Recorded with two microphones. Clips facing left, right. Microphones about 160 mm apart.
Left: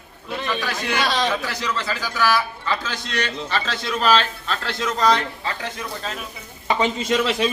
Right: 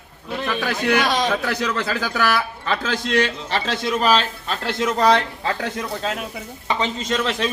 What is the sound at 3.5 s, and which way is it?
A man's voice, 20° right (ahead or behind).